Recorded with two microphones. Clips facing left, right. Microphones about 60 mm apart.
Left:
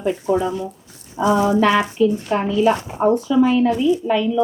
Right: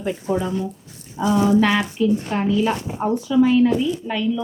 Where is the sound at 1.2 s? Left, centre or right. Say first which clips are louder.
Left 1 dB; left.